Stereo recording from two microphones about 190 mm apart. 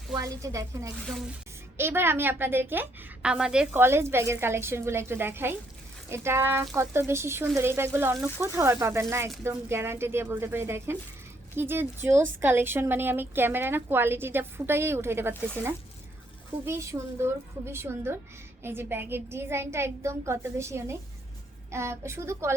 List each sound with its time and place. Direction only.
0.2 s speech: 15° right (ahead or behind)